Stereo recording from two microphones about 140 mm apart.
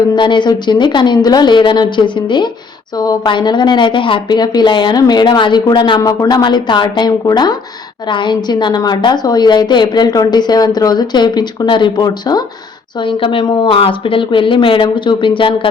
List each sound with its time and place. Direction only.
0.2 s a woman's voice: 35° left (ahead or behind)